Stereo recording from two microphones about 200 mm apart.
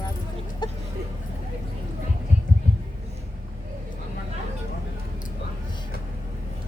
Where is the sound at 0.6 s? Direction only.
20° left (ahead or behind).